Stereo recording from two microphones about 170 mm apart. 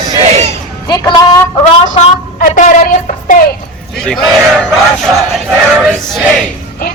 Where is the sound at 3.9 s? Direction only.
Centre (ahead or behind).